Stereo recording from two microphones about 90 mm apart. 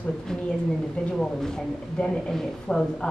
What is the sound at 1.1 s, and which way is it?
A woman's voice, 5° left (ahead or behind).